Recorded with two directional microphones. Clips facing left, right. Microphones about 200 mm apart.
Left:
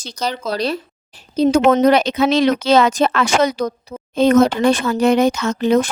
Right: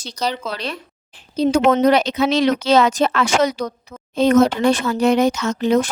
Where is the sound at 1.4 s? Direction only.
50° left (ahead or behind).